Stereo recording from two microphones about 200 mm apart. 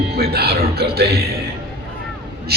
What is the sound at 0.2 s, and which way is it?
A man's voice, 55° right (ahead or behind).